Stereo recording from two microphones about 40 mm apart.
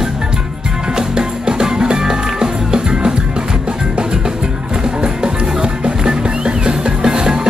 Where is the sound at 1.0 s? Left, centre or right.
Centre.